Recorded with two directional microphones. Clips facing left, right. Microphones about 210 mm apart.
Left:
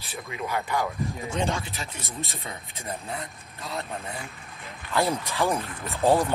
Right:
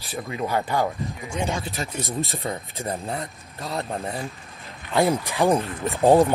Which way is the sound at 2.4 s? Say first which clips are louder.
Right 9 dB; 30° right (ahead or behind).